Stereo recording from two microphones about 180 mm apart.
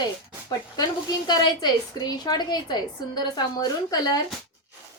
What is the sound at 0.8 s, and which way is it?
A woman's voice, 20° left (ahead or behind).